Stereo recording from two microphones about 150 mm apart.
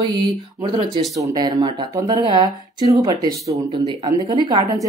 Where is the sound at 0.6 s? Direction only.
30° right (ahead or behind).